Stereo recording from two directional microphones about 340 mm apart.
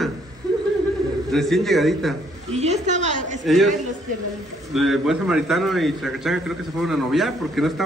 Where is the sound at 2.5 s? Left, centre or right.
Centre.